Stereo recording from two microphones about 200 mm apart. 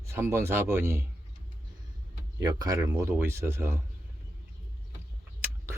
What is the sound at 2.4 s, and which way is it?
Speech, 20° right (ahead or behind).